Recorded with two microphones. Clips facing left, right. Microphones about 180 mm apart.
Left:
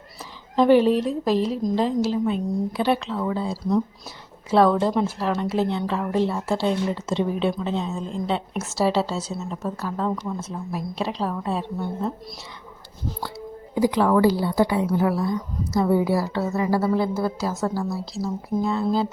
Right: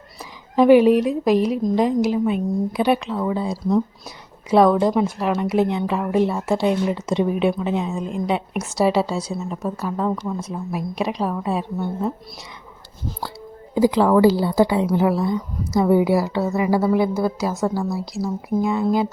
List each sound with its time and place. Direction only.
0.5 s a woman's voice: 10° right (ahead or behind)
13.7 s a woman's voice: 25° right (ahead or behind)